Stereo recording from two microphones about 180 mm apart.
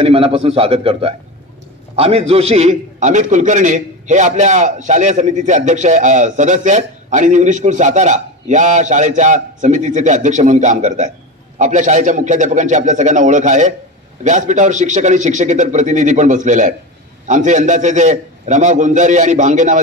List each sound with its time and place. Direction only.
0.0 s a man's voice: 30° right (ahead or behind)